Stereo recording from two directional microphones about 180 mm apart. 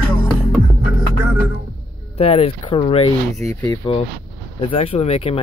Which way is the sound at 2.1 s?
35° left (ahead or behind).